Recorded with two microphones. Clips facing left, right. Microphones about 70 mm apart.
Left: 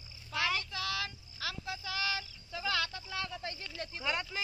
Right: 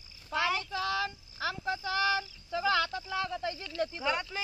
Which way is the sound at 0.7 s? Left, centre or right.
Right.